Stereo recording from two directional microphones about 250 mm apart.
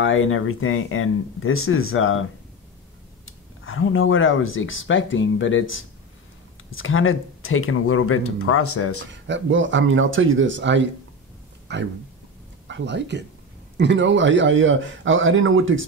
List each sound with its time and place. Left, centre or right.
0.0 s speech: left
3.3 s speech: left
9.1 s a man's voice: right